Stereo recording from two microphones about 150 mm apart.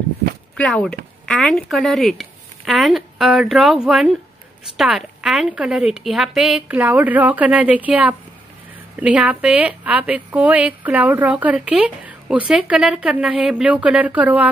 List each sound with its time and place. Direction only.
0.6 s a woman's voice: 5° left (ahead or behind); by 14.5 s 10° right (ahead or behind)